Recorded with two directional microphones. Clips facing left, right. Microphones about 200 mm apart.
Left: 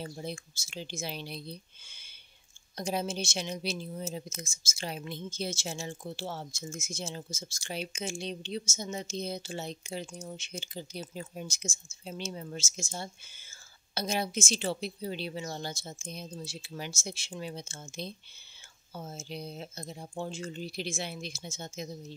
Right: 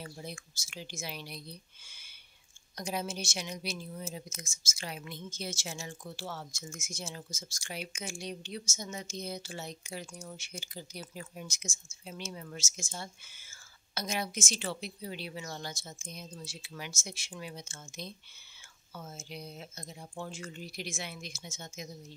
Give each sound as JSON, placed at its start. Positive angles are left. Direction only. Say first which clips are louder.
{"t": 0.0, "sound": "speech", "louder": "left 5 dB", "side_deg": 25}